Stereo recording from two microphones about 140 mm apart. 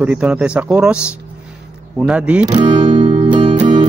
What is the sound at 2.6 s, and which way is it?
Music, 35° right (ahead or behind).